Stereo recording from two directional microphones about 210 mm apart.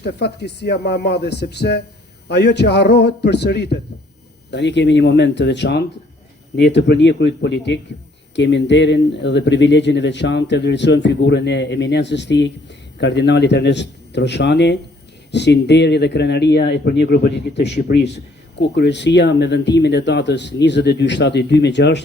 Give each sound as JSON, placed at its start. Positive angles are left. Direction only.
{"t": 0.0, "sound": "speech", "side_deg": 50}